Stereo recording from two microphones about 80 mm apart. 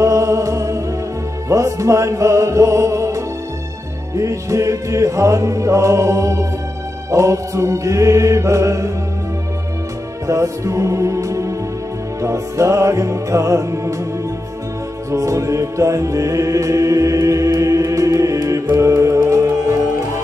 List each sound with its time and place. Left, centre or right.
0.0 s music: right
10.2 s music: right
15.0 s music: right